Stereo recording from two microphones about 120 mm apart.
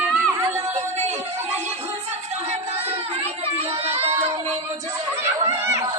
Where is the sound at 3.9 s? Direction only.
60° right (ahead or behind).